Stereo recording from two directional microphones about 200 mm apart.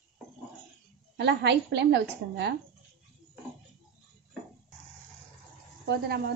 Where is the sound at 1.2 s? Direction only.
60° right (ahead or behind).